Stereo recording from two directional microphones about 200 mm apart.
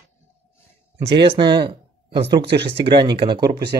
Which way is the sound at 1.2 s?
25° right (ahead or behind).